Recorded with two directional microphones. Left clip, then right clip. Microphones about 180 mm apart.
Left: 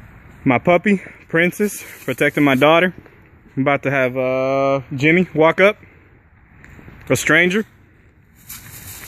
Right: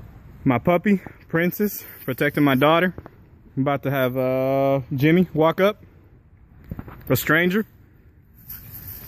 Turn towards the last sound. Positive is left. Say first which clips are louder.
# left 5 dB
turn(degrees=0)  # may be behind; listen again after turning